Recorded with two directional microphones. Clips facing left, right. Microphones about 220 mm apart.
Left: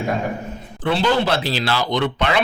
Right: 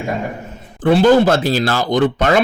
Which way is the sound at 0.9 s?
45° right (ahead or behind).